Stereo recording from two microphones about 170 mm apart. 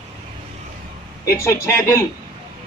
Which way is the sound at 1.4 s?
15° left (ahead or behind).